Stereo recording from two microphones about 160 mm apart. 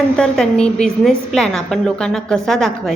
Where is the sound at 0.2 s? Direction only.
5° left (ahead or behind).